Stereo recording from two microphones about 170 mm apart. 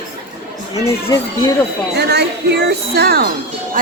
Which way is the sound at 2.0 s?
75° right (ahead or behind).